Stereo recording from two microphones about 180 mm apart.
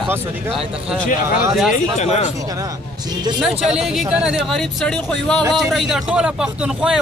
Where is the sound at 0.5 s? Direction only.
Centre (ahead or behind).